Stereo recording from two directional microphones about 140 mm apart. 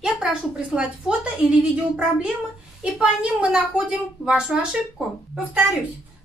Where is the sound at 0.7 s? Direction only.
5° right (ahead or behind).